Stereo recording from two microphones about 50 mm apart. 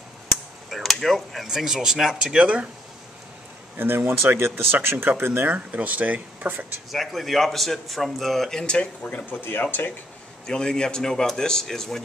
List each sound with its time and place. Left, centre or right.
0.7 s speech: centre; by 2.7 s right
3.7 s speech: right
5.5 s speech: right
6.9 s a man's voice: centre
8.5 s a man's voice: centre
9.0 s speech: left
9.4 s speech: left
10.4 s a man's voice: centre